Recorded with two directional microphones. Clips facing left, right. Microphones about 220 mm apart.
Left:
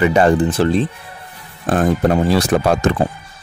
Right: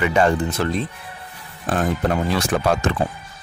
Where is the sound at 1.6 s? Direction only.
45° left (ahead or behind).